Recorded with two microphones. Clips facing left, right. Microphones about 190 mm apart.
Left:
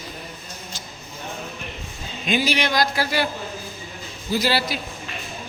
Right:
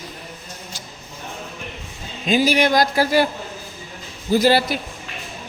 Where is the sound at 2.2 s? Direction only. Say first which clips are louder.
Right 5 dB; 40° right (ahead or behind).